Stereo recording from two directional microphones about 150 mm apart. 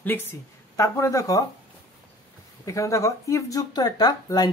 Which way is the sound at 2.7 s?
20° left (ahead or behind).